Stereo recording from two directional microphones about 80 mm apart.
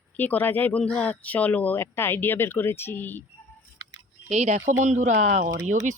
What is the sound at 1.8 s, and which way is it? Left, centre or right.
A woman's voice, left.